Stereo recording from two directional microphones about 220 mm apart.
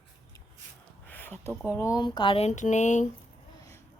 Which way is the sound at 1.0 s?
10° left (ahead or behind).